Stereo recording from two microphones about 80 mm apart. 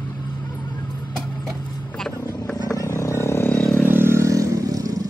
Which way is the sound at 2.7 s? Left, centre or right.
Left.